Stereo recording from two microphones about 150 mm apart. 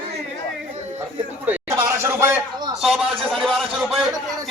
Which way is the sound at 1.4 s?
15° right (ahead or behind).